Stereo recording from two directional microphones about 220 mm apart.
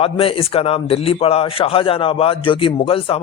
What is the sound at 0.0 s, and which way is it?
A man's voice, 25° left (ahead or behind).